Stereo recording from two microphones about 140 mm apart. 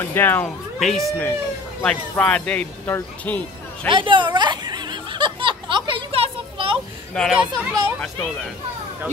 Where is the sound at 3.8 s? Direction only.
35° right (ahead or behind).